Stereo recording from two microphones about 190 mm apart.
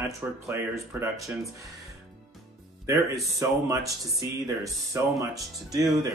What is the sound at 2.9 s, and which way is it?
Speech, 15° right (ahead or behind).